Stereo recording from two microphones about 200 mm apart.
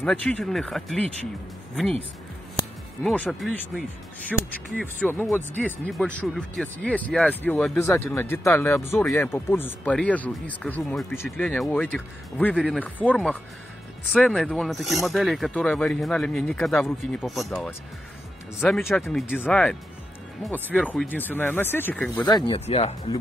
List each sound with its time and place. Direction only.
0.0 s speech: 5° left (ahead or behind)
3.0 s speech: 5° left (ahead or behind)
22.3 s speech: 25° left (ahead or behind)